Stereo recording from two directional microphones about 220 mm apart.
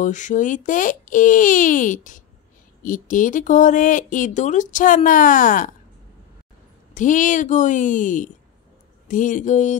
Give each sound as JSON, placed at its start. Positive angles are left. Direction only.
{"t": 0.0, "sound": "speech", "side_deg": 35}
{"t": 6.9, "sound": "speech", "side_deg": 35}